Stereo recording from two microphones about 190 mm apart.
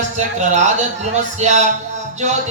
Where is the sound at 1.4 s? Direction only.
40° right (ahead or behind).